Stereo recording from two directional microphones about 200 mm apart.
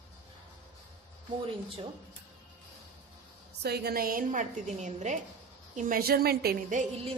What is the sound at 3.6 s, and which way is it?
A woman's voice, 50° right (ahead or behind).